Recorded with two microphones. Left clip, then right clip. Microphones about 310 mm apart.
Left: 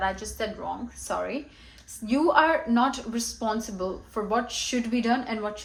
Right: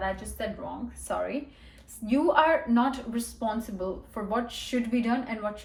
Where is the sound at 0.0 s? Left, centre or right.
Centre.